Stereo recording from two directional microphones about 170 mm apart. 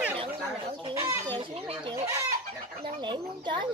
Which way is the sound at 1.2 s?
30° right (ahead or behind).